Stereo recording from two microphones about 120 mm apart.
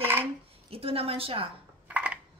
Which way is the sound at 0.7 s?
55° right (ahead or behind).